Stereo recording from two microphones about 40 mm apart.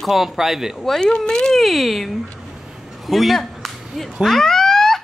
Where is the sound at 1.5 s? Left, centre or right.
Centre.